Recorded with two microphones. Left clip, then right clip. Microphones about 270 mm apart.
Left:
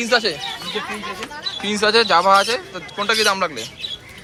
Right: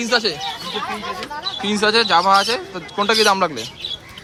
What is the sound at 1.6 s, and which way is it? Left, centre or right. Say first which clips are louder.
Speech: left 1 dB; centre.